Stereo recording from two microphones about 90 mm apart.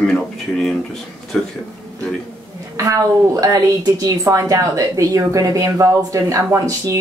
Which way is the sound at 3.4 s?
40° right (ahead or behind).